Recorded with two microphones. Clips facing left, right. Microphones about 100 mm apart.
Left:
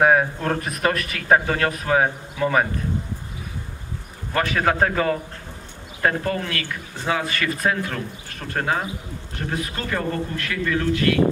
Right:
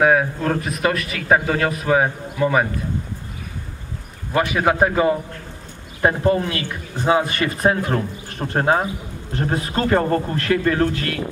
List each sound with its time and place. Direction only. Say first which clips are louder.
0.0 s a man's voice: right 1 dB; centre (ahead or behind)
4.5 s a man's voice: right 2 dB; 10° right (ahead or behind); by 11.1 s 40° right (ahead or behind)